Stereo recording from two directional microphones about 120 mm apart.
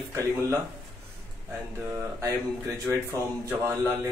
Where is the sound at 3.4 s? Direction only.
25° right (ahead or behind).